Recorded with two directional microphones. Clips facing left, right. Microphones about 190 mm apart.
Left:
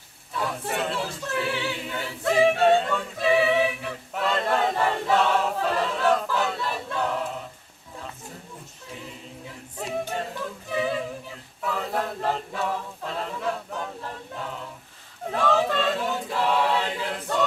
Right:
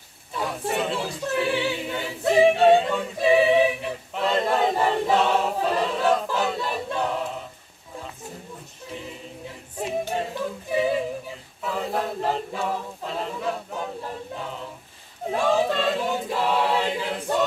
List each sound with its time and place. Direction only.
0.4 s a sound: 15° right (ahead or behind)
0.9 s a capella: 15° right (ahead or behind)
4.2 s choir: 15° right (ahead or behind)
10.7 s a capella: 15° right (ahead or behind)
15.3 s choir: 15° right (ahead or behind)